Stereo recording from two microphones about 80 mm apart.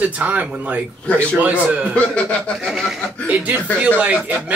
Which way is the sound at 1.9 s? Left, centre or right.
Centre.